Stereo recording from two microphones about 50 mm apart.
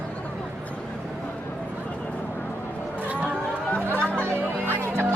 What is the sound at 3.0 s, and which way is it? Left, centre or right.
Chatter, right.